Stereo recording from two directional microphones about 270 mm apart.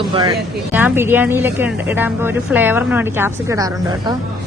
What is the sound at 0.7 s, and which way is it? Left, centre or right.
A woman's voice, centre.